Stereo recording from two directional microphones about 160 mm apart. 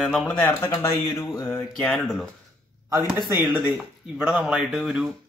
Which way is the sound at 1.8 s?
5° left (ahead or behind).